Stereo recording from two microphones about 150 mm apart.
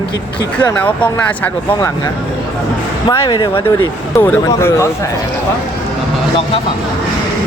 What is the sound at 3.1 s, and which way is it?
Speech, 30° left (ahead or behind).